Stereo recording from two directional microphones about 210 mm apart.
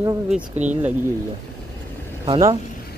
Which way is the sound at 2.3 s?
15° right (ahead or behind).